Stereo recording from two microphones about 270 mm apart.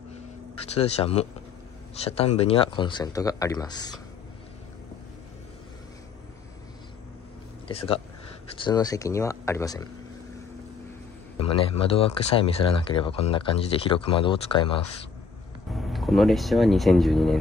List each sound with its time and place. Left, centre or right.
0.7 s speech: left
7.6 s speech: centre
11.3 s speech: left
15.7 s speech: centre